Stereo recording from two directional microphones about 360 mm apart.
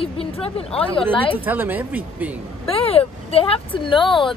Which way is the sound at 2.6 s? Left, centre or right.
Centre.